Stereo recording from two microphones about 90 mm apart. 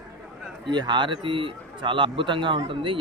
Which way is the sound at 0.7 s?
60° right (ahead or behind).